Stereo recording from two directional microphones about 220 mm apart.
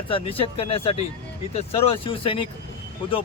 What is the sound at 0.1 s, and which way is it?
A man's voice, 25° left (ahead or behind).